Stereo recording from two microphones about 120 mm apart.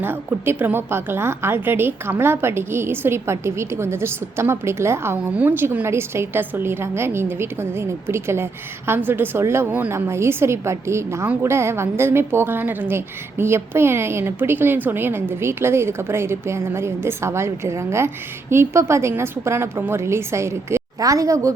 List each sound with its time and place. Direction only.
0.0 s a woman's voice: 20° right (ahead or behind)